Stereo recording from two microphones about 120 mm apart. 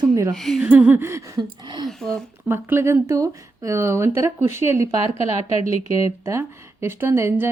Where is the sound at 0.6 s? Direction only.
10° right (ahead or behind); by 1.8 s 35° right (ahead or behind).